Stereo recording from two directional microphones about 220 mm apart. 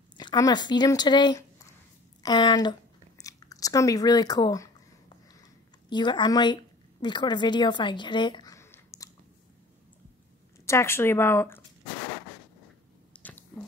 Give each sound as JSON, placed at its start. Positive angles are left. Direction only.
{"t": 0.2, "sound": "speech", "side_deg": 20}
{"t": 5.9, "sound": "a woman's voice", "side_deg": 20}
{"t": 10.6, "sound": "speech", "side_deg": 10}
{"t": 13.1, "sound": "squish", "side_deg": 5}